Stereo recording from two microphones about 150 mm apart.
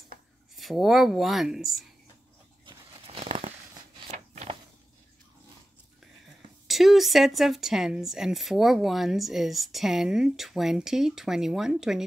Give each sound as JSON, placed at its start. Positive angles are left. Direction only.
{"t": 0.6, "sound": "speech", "side_deg": 0}
{"t": 2.6, "sound": "a sound", "side_deg": -40}
{"t": 6.7, "sound": "speech", "side_deg": 0}